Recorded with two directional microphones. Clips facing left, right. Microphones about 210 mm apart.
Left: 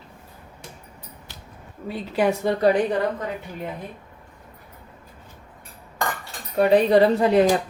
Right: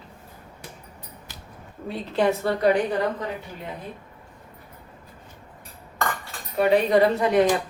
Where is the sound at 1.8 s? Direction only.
5° left (ahead or behind).